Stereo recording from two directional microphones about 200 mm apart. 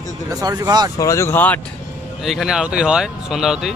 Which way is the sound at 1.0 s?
15° left (ahead or behind).